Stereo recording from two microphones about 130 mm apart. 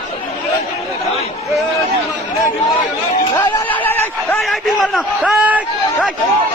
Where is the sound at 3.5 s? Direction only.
15° left (ahead or behind).